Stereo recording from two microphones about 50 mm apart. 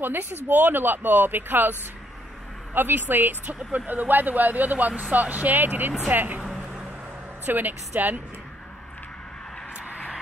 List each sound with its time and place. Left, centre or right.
0.0 s speech: right
6.4 s vehicle: centre
7.4 s speech: right